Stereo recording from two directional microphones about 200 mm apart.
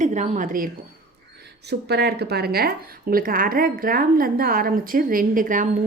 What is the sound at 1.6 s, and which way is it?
A woman's voice, 55° right (ahead or behind).